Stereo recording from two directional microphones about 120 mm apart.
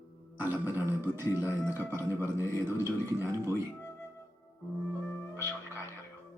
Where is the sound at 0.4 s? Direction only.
15° right (ahead or behind).